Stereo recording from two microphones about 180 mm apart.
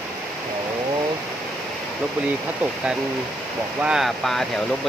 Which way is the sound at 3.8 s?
5° right (ahead or behind).